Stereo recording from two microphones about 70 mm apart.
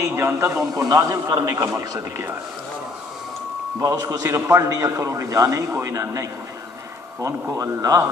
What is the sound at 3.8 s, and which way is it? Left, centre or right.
A man's voice, right.